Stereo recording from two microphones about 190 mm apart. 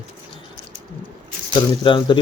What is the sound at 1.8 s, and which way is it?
Speech, 25° left (ahead or behind).